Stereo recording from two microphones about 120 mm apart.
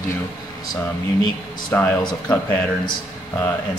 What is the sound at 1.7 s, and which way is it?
Speech, 15° left (ahead or behind).